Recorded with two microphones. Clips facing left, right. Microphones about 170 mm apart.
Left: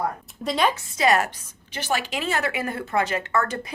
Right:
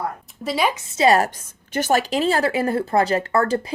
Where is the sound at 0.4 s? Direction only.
5° right (ahead or behind).